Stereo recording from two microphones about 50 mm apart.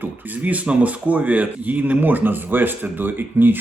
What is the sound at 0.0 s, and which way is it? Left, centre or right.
Speech, right.